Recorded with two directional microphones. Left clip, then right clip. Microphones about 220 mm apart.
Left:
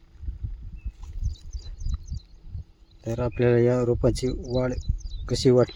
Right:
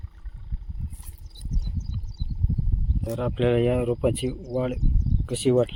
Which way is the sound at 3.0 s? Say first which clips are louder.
Left 1 dB; 20° left (ahead or behind).